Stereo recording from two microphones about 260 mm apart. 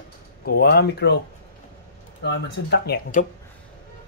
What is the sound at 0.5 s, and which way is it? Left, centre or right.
Speech, left.